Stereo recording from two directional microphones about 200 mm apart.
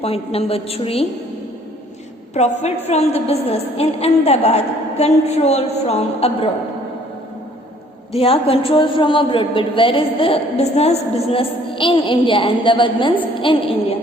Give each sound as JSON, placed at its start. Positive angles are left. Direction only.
{"t": 0.0, "sound": "a man's voice", "side_deg": 30}
{"t": 2.3, "sound": "a woman's voice", "side_deg": 35}
{"t": 8.1, "sound": "a man's voice", "side_deg": 30}